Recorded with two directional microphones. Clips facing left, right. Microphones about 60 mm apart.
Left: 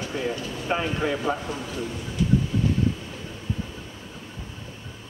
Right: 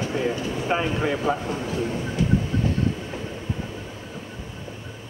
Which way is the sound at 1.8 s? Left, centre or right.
Right.